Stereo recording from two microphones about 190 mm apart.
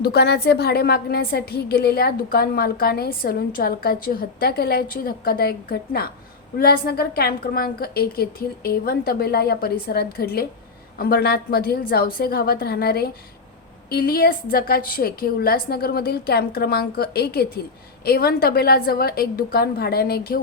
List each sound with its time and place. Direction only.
0.0 s a woman's voice: 60° left (ahead or behind)